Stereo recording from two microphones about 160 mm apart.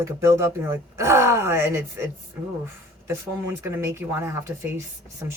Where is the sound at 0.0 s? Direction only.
15° right (ahead or behind).